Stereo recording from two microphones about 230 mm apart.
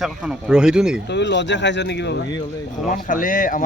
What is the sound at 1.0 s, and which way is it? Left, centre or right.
Speech, left.